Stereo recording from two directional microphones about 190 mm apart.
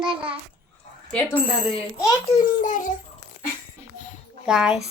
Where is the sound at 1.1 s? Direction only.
10° left (ahead or behind).